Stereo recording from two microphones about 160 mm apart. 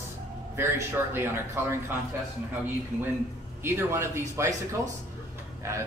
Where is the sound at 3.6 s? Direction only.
15° right (ahead or behind).